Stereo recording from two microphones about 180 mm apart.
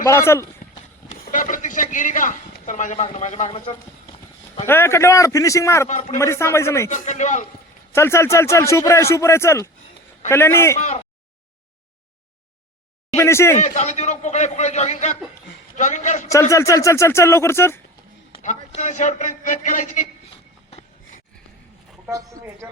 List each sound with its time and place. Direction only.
0.0 s speech: 15° left (ahead or behind)
1.2 s a man's voice: 45° left (ahead or behind); by 4.1 s 30° left (ahead or behind)
4.6 s speech: 15° left (ahead or behind)
5.9 s a man's voice: 40° left (ahead or behind)
6.1 s speech: 15° left (ahead or behind)
6.9 s a man's voice: 40° left (ahead or behind)
7.9 s speech: 15° left (ahead or behind)
10.8 s a man's voice: 35° left (ahead or behind)
13.1 s speech: 15° left (ahead or behind)
13.6 s a man's voice: 40° left (ahead or behind)
16.3 s speech: 15° left (ahead or behind)
18.4 s speech: 40° left (ahead or behind)
20.3 s a sound: 35° left (ahead or behind)
22.0 s a woman's voice: 20° right (ahead or behind)